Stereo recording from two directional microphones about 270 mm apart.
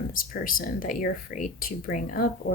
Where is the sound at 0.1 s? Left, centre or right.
Left.